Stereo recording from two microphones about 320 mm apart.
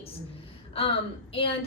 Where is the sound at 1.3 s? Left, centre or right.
Centre.